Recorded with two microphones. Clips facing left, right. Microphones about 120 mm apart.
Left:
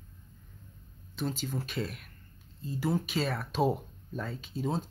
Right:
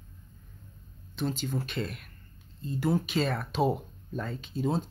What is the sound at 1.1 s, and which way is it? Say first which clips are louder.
Speech: right 3 dB; 5° left (ahead or behind).